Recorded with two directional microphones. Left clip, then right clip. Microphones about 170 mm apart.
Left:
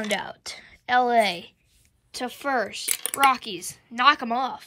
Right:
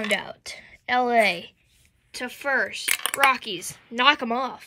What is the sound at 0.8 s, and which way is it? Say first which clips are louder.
Speech: even; 5° right (ahead or behind).